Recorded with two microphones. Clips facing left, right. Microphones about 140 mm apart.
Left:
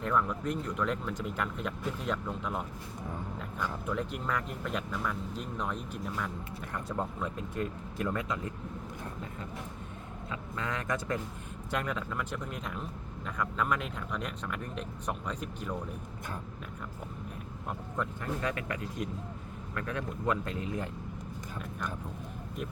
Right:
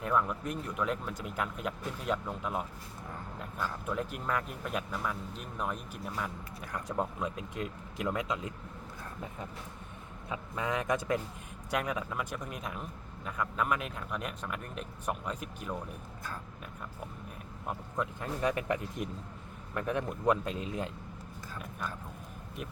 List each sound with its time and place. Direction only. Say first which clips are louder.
0.0 s speech: left 1 dB; 5° right (ahead or behind)
10.2 s speech: right 2 dB; 20° right (ahead or behind)
17.9 s speech: left 1 dB; 20° right (ahead or behind)